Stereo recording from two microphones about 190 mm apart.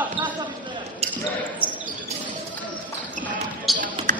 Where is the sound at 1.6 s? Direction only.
10° right (ahead or behind).